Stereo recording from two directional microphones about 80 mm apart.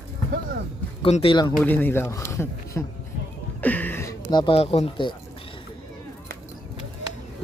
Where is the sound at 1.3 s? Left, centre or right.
Left.